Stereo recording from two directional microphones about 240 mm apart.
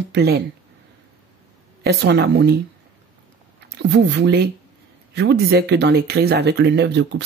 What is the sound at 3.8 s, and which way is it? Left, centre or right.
Speech, right.